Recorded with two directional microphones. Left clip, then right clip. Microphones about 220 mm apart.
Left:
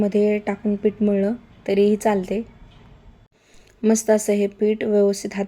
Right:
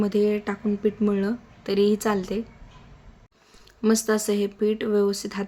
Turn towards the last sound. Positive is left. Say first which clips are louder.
# left 4 dB
turn(degrees=5)  # may be behind; listen again after turning